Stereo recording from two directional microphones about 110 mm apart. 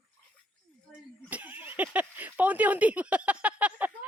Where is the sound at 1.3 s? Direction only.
15° right (ahead or behind).